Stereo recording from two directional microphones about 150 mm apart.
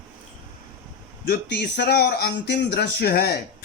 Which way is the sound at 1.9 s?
90° left.